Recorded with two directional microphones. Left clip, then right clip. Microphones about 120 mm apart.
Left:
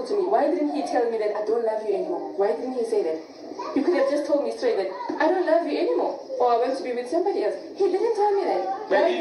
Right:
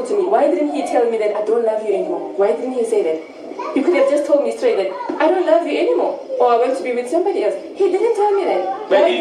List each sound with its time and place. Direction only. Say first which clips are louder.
0.1 s a woman's voice: right 7 dB; 50° right (ahead or behind)
1.4 s a woman's voice: right 7 dB; 25° right (ahead or behind)
1.7 s a woman's voice: right 7 dB; 50° right (ahead or behind)